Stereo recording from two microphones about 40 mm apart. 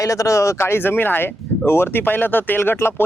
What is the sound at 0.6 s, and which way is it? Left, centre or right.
Speech, left.